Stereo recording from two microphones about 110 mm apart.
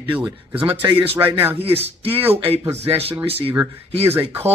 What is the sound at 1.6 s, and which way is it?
Speech, 60° right (ahead or behind).